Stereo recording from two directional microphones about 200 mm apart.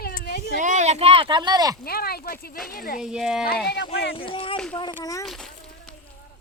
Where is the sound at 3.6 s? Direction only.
55° left (ahead or behind).